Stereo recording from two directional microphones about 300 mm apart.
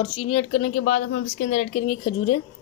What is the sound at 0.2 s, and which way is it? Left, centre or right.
Speech, centre.